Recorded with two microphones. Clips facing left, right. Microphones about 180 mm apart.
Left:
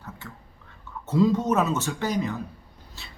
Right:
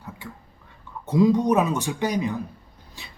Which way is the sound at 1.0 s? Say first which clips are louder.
Right 3 dB; 15° right (ahead or behind).